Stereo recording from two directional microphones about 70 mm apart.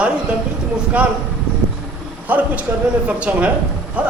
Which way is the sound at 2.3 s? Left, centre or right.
Right.